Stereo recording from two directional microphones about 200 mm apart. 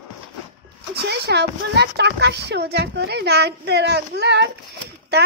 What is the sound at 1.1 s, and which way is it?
A child's voice, 55° right (ahead or behind).